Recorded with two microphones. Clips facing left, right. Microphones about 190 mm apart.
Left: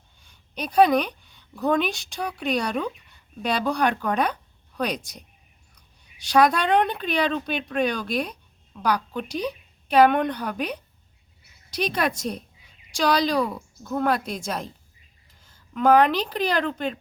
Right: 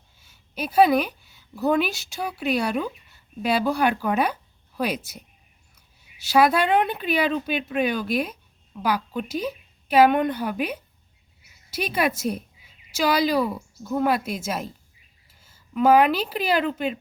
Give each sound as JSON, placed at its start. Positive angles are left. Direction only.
{"t": 0.2, "sound": "a woman's voice", "side_deg": -5}